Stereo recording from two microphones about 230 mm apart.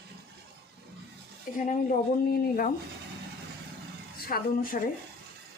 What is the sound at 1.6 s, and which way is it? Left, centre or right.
Speech, left.